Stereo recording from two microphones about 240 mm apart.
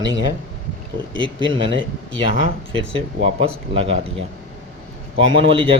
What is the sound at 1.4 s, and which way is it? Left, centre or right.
Speech, right.